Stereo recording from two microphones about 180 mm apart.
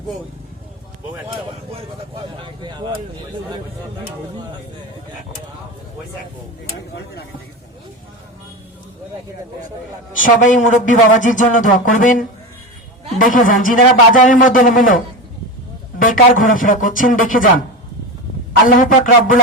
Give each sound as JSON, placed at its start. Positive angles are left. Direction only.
{"t": 1.7, "sound": "speech", "side_deg": -30}
{"t": 6.9, "sound": "speech", "side_deg": 65}
{"t": 10.2, "sound": "a man's voice", "side_deg": 45}
{"t": 13.1, "sound": "a man's voice", "side_deg": 50}
{"t": 16.0, "sound": "a man's voice", "side_deg": 50}
{"t": 18.8, "sound": "a man's voice", "side_deg": 45}